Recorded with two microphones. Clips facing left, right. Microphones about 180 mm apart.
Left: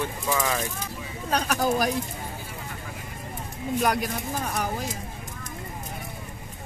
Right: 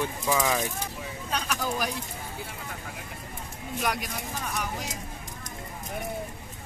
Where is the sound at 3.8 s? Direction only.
40° left (ahead or behind).